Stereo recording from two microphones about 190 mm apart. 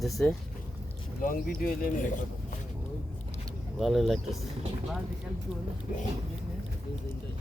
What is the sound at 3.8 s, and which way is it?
Speech, centre (ahead or behind).